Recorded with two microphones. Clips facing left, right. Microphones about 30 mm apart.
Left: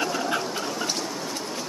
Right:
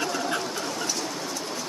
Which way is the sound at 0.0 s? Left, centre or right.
Centre.